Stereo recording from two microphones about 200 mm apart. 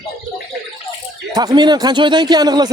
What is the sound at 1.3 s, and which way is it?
Speech, 20° right (ahead or behind).